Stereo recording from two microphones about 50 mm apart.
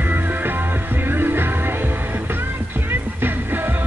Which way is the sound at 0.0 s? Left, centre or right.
Right.